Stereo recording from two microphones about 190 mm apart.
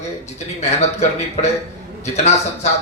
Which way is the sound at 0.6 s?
35° left (ahead or behind).